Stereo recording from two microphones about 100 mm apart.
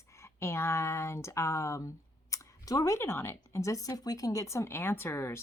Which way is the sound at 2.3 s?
35° left (ahead or behind).